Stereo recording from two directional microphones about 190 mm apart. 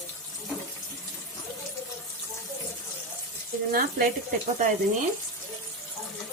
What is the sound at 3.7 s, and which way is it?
Speech, 50° right (ahead or behind).